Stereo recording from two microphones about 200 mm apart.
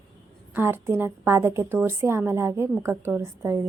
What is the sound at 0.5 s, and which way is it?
A woman's voice, 10° right (ahead or behind).